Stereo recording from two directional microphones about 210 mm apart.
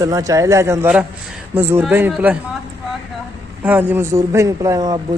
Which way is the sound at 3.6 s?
10° right (ahead or behind).